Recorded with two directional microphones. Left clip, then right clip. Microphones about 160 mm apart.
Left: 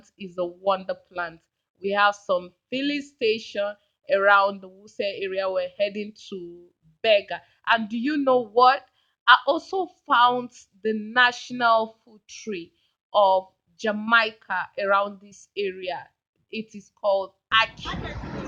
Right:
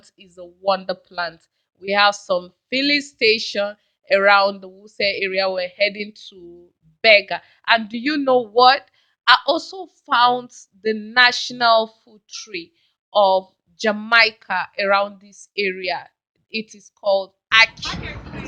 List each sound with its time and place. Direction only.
0.3 s speech: 15° right (ahead or behind)
14.1 s speech: 15° right (ahead or behind)